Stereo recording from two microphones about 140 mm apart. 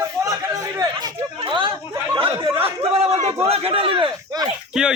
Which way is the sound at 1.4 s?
35° right (ahead or behind).